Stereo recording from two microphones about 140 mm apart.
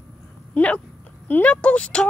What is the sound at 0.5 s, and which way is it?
Speech, 10° left (ahead or behind).